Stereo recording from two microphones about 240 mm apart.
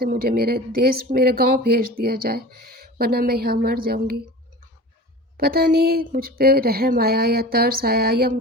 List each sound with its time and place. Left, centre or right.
0.0 s speech: right
5.4 s speech: right